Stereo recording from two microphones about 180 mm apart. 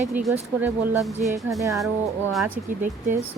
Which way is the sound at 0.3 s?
15° right (ahead or behind).